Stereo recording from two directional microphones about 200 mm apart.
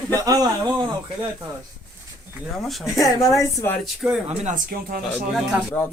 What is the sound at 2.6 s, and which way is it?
Speech, centre (ahead or behind).